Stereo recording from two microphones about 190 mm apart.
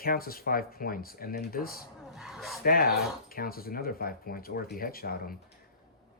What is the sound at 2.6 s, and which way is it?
Speech, 50° left (ahead or behind).